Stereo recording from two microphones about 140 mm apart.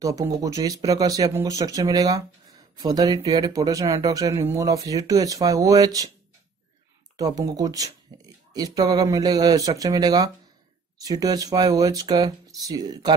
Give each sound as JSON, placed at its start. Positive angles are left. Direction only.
{"t": 0.0, "sound": "speech", "side_deg": -25}
{"t": 7.2, "sound": "speech", "side_deg": -25}